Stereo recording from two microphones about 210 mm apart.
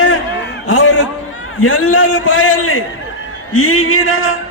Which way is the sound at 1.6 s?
90° left.